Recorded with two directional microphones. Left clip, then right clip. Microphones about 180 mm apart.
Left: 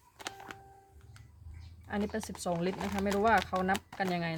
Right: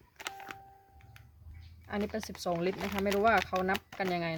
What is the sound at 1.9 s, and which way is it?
Speech, 25° right (ahead or behind).